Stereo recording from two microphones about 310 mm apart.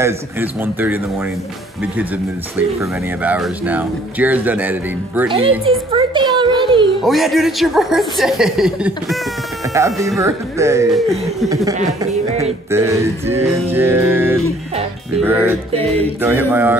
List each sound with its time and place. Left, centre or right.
0.0 s music: centre
2.8 s speech: centre
5.7 s a sound: centre
7.0 s speech: centre
9.8 s music: centre
10.0 s speech: centre
11.4 s music: centre
12.7 s music: centre
15.7 s music: centre
16.2 s music: centre